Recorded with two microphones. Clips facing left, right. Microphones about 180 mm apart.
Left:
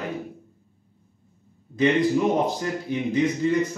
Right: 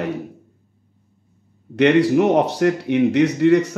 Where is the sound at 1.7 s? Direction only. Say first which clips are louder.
Right 6 dB; 75° right (ahead or behind).